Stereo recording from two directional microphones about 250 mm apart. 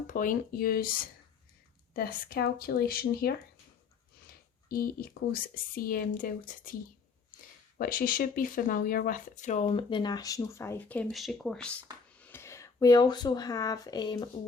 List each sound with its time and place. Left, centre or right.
0.1 s speech: left
7.8 s speech: left; by 14.3 s centre